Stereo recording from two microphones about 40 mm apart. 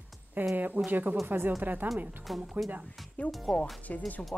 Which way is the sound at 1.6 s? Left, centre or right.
Right.